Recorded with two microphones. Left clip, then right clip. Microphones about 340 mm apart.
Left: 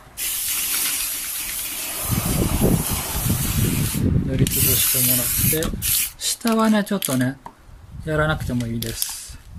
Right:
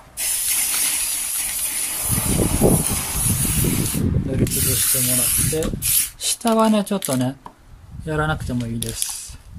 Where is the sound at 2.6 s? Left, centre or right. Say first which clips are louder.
Right 5 dB; right.